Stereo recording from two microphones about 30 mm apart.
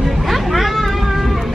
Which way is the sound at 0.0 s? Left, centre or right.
Centre.